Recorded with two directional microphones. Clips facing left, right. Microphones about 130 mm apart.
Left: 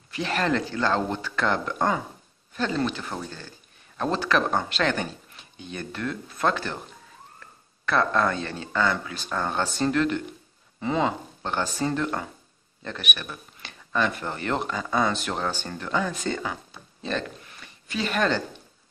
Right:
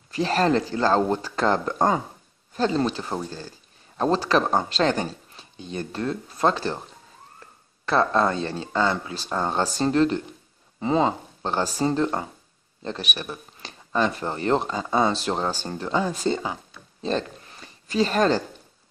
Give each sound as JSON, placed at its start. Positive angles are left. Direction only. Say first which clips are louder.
{"t": 0.1, "sound": "speech", "louder": "right 4 dB", "side_deg": -35}
{"t": 7.8, "sound": "speech", "louder": "right 2 dB", "side_deg": -30}
{"t": 17.0, "sound": "a sound", "louder": "right 4 dB", "side_deg": -30}